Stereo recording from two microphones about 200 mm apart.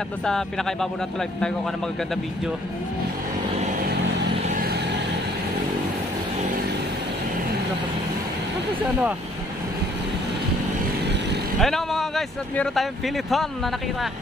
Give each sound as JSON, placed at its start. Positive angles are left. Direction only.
{"t": 0.2, "sound": "speech", "side_deg": 0}
{"t": 4.5, "sound": "vehicle", "side_deg": -45}
{"t": 11.6, "sound": "speech", "side_deg": 0}